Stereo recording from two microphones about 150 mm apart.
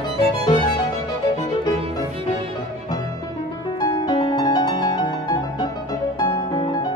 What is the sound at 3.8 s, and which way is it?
Music, 25° left (ahead or behind).